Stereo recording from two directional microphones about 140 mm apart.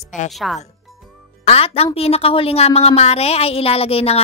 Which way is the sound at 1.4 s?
45° left (ahead or behind).